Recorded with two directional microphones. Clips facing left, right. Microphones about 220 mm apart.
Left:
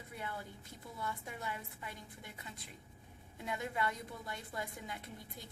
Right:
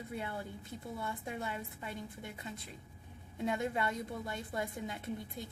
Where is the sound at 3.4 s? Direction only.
25° right (ahead or behind).